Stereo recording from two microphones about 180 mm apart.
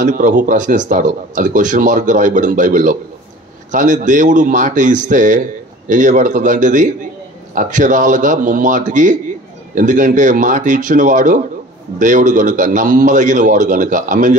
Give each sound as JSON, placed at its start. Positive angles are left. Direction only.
{"t": 0.0, "sound": "speech", "side_deg": -45}